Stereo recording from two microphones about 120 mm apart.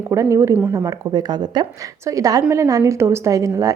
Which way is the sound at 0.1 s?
25° right (ahead or behind).